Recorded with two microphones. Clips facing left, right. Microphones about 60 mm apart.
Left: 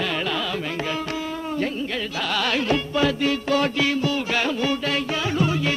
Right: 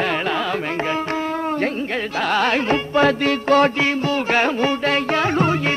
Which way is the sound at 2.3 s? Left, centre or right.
Right.